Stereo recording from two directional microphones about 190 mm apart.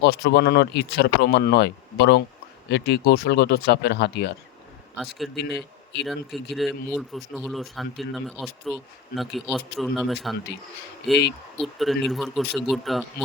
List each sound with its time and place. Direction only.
0.0 s speech: 60° left (ahead or behind)
6.1 s speech: centre (ahead or behind)
11.6 s speech: centre (ahead or behind)